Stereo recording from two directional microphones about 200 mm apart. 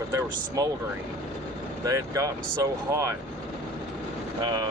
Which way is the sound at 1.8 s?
15° right (ahead or behind).